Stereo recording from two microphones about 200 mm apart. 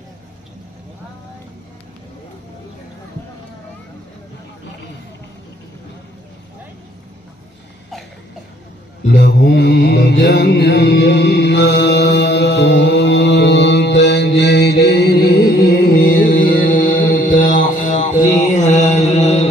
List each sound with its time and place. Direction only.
9.0 s mantra: 60° left (ahead or behind); by 19.4 s 35° left (ahead or behind)